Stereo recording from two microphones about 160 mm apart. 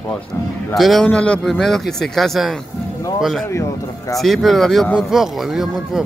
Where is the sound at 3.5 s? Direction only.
20° left (ahead or behind).